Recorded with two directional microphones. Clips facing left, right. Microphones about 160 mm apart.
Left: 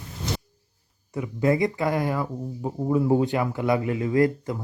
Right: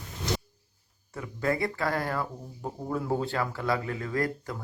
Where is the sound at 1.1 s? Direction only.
15° left (ahead or behind).